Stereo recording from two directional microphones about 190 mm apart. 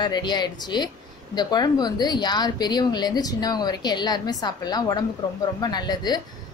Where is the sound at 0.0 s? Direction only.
25° left (ahead or behind).